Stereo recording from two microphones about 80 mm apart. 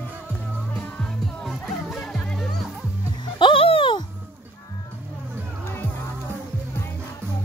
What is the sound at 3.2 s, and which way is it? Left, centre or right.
Music, left.